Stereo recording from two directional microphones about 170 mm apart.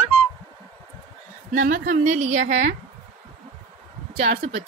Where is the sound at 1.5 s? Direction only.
50° right (ahead or behind).